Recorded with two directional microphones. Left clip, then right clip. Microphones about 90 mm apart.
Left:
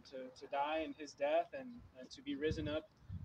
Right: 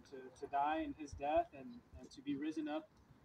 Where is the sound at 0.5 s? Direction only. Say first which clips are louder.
Right 1 dB; 35° left (ahead or behind).